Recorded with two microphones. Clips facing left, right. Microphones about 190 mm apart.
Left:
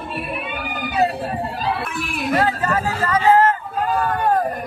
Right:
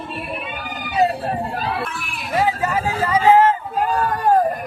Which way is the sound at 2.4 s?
10° right (ahead or behind).